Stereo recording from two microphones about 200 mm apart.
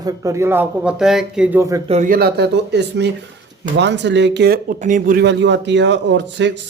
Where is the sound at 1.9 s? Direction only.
40° right (ahead or behind).